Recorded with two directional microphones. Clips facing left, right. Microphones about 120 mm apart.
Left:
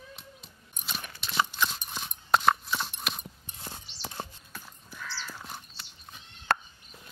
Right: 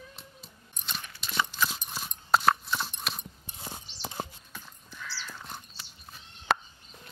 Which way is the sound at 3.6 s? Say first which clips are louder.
Right 2 dB; 10° right (ahead or behind).